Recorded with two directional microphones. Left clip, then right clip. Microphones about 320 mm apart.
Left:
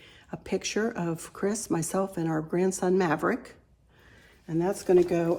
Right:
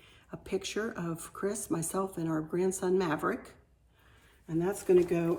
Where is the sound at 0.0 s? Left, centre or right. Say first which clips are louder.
Left 6 dB; left.